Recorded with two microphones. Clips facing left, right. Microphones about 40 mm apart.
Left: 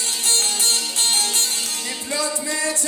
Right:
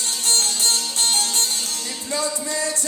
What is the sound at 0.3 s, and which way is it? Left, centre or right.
Music, left.